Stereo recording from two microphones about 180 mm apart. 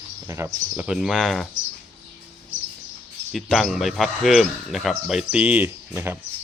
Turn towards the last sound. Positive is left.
turn(degrees=-10)  # may be behind; listen again after turning